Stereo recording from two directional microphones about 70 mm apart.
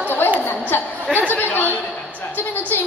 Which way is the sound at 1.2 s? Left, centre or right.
Left.